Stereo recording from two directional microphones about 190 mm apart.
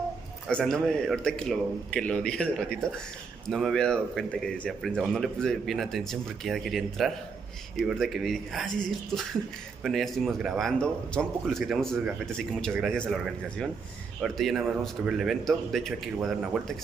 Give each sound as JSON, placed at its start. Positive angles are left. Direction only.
{"t": 0.5, "sound": "speech", "side_deg": 5}